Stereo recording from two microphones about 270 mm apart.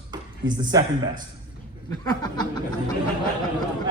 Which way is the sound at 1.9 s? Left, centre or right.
Centre.